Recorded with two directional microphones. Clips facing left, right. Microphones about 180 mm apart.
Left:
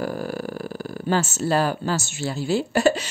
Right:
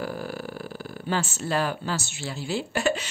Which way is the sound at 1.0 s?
45° left (ahead or behind).